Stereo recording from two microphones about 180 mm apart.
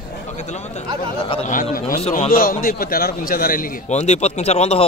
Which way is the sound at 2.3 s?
50° left (ahead or behind).